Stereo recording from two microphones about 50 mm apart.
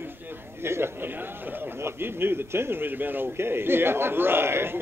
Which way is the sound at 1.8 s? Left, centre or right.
Right.